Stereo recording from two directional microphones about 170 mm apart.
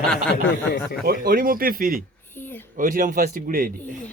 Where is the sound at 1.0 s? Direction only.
60° right (ahead or behind).